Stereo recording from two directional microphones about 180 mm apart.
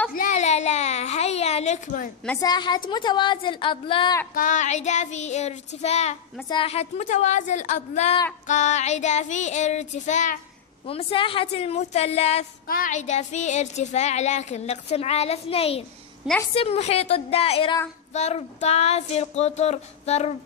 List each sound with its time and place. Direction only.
0.1 s a sound: 45° left (ahead or behind)
2.4 s a woman's voice: 25° left (ahead or behind)
4.3 s speech: 45° left (ahead or behind)
10.9 s speech: 30° left (ahead or behind)
12.6 s speech: 50° left (ahead or behind)